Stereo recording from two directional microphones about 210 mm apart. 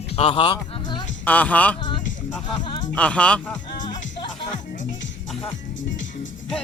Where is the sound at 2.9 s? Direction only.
5° left (ahead or behind).